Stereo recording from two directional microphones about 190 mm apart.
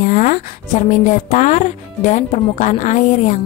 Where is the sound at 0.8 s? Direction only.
40° left (ahead or behind).